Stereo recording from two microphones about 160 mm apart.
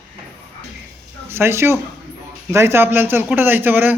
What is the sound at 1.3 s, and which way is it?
A man's voice, 15° right (ahead or behind).